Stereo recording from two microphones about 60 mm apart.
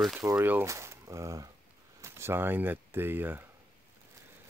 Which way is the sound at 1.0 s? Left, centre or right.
Right.